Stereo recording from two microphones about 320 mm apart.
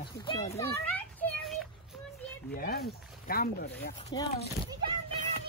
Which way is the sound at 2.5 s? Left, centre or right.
Left.